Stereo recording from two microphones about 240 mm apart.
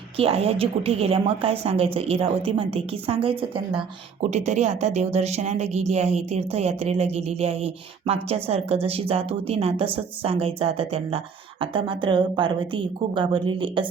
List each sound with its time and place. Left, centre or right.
0.2 s a woman's voice: right